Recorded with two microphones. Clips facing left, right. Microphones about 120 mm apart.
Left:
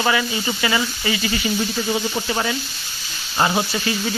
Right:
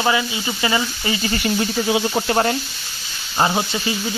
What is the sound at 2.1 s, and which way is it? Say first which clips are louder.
Speech: right 5 dB; 45° right (ahead or behind).